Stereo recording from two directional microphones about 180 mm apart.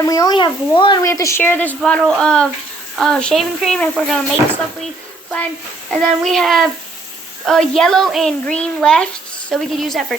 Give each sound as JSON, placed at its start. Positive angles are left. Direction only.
{"t": 0.0, "sound": "a child's voice", "side_deg": 20}
{"t": 5.9, "sound": "a child's voice", "side_deg": 0}